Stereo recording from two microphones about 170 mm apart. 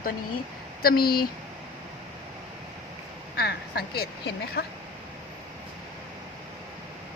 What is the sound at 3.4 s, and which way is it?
Speech, 70° left (ahead or behind).